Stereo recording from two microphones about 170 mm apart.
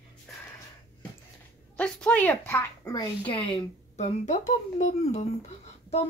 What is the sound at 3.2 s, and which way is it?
Speech, 30° left (ahead or behind).